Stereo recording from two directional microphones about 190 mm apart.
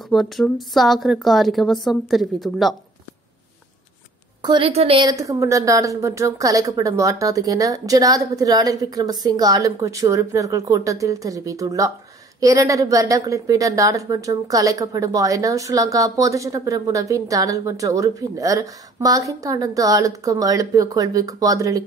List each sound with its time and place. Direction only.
0.1 s a woman's voice: centre (ahead or behind)
4.4 s a woman's voice: 25° right (ahead or behind)